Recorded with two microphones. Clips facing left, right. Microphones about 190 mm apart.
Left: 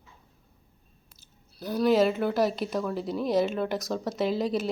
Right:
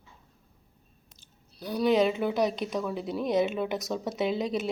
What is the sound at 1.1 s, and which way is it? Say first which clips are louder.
Speech: left 2 dB; 5° left (ahead or behind).